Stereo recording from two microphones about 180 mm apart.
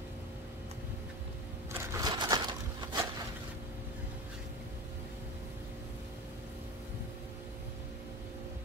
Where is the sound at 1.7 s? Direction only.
20° right (ahead or behind).